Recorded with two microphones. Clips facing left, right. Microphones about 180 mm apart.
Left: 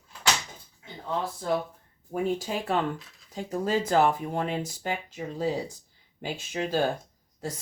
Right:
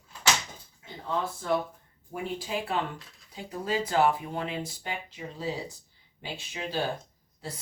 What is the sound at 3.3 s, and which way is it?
Speech, 45° left (ahead or behind).